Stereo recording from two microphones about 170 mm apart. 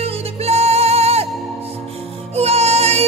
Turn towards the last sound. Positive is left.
turn(degrees=-40)  # may be behind; listen again after turning